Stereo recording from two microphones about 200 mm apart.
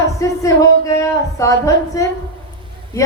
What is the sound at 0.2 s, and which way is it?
A woman's voice, 15° left (ahead or behind).